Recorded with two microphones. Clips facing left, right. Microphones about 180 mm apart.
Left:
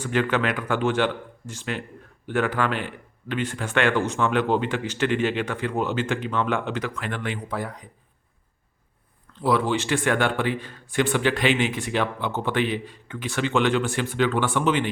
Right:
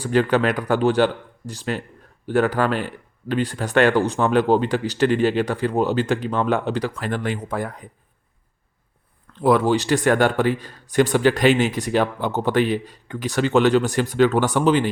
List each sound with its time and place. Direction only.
0.0 s speech: 35° right (ahead or behind)
9.4 s speech: 45° right (ahead or behind)